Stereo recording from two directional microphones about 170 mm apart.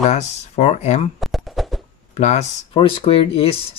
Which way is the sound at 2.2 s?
40° left (ahead or behind).